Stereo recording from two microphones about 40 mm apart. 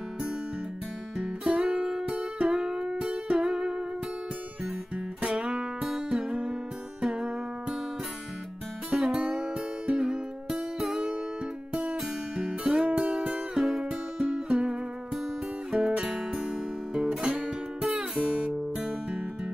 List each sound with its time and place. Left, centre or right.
1.1 s music: centre
4.9 s music: right
8.9 s music: right
10.5 s music: centre
11.8 s music: right
13.6 s music: centre
14.2 s music: right
15.7 s guitar: right
17.8 s music: centre